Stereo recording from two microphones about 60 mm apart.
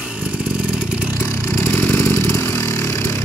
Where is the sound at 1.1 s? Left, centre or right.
Left.